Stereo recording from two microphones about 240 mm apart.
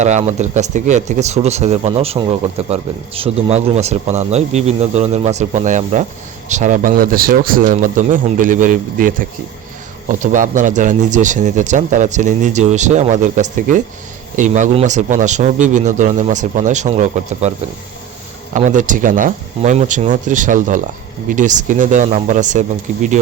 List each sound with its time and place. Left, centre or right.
0.0 s speech: right
18.5 s speech: right